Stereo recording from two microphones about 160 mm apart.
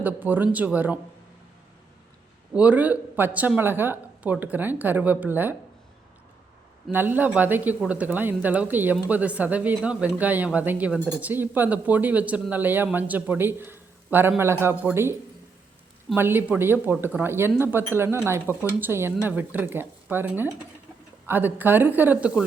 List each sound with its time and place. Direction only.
0.0 s speech: 10° right (ahead or behind)
2.5 s speech: 10° right (ahead or behind)
6.9 s speech: 10° right (ahead or behind)
16.1 s speech: 15° right (ahead or behind)